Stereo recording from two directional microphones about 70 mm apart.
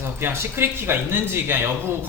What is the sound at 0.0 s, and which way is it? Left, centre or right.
Speech, right.